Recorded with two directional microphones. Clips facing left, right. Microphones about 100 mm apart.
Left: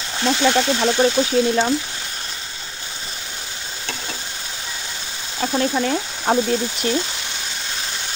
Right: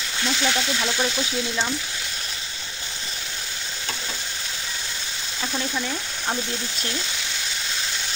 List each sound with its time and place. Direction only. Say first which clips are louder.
0.2 s speech: left 8 dB; 50° left (ahead or behind)
5.9 s speech: left 9 dB; 55° left (ahead or behind)